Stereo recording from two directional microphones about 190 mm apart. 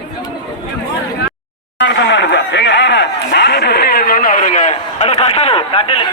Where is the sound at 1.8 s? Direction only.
65° left (ahead or behind).